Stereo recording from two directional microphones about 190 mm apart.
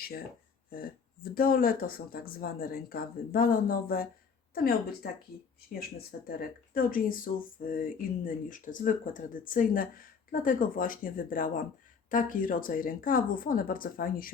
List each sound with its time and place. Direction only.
0.7 s speech: 50° left (ahead or behind)
6.0 s speech: 55° left (ahead or behind)